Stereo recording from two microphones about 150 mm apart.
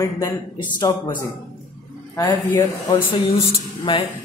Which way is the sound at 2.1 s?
25° left (ahead or behind).